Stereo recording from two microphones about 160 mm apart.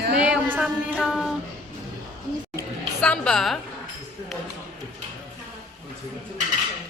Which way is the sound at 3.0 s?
5° left (ahead or behind).